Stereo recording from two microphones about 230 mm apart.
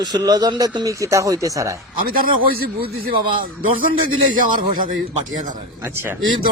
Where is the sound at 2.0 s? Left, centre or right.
Right.